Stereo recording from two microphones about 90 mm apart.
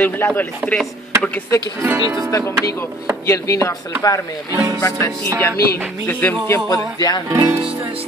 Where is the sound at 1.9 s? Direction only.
40° right (ahead or behind).